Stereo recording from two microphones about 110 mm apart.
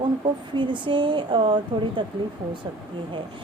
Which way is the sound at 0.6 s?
45° right (ahead or behind).